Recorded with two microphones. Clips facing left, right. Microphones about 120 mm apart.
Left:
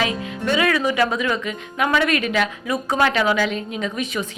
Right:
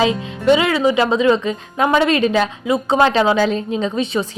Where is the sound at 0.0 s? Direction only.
25° right (ahead or behind).